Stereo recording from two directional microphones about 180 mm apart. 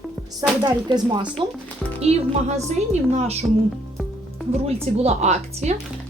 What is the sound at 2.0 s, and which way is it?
Speech, 35° right (ahead or behind).